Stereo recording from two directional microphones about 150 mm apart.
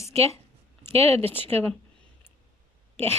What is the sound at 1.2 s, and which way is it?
Speech, 15° left (ahead or behind).